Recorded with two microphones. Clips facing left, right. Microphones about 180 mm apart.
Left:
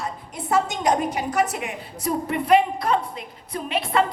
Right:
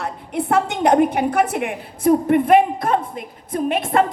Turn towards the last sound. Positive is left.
turn(degrees=-50)  # may be behind; listen again after turning